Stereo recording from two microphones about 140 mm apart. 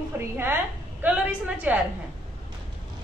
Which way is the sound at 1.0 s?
10° right (ahead or behind).